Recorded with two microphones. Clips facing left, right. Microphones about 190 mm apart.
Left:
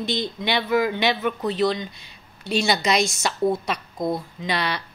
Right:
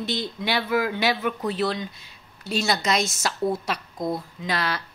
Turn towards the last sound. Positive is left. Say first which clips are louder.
# left 1 dB
turn(degrees=0)  # may be behind; listen again after turning